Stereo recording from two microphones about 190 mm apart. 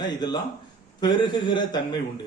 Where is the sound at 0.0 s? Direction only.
20° left (ahead or behind).